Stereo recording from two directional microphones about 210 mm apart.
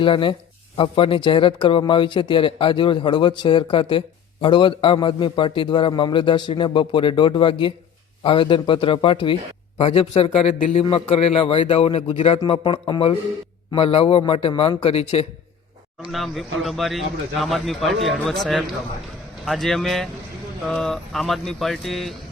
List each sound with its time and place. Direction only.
0.0 s speech: 25° left (ahead or behind)
16.0 s speech: centre (ahead or behind)